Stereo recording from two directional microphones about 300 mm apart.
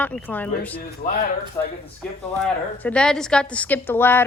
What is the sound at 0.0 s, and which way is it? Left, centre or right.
Speech, centre.